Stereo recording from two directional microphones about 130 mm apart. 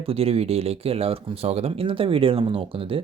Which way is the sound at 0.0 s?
50° right (ahead or behind).